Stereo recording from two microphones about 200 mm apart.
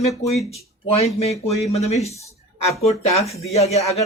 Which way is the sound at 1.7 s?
35° left (ahead or behind).